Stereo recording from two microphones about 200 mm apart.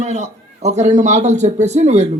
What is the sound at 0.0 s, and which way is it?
A man's voice, 35° right (ahead or behind).